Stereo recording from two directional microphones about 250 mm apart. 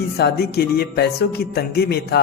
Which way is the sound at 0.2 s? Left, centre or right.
Left.